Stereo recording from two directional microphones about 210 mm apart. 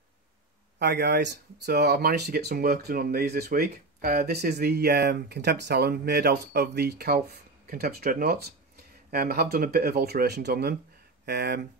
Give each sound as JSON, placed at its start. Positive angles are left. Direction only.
{"t": 0.7, "sound": "speech", "side_deg": -50}